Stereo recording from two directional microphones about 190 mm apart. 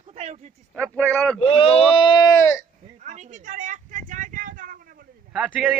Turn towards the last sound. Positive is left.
turn(degrees=-5)  # may be behind; listen again after turning